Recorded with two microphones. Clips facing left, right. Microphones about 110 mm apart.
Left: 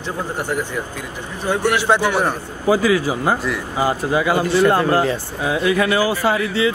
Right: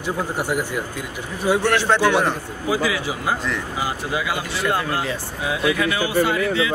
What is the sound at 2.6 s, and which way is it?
Speech, 40° left (ahead or behind).